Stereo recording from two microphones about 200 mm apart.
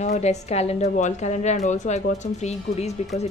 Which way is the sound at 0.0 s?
35° left (ahead or behind).